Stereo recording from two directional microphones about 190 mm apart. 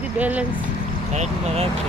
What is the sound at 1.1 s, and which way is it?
Speech, 35° right (ahead or behind).